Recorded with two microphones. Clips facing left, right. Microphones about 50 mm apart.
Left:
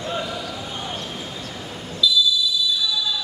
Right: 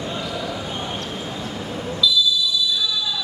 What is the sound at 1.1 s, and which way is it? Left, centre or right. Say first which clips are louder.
Vehicle: right 3 dB; right.